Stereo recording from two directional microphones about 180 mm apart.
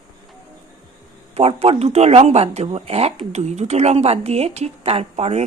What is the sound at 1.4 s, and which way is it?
Speech, 35° right (ahead or behind).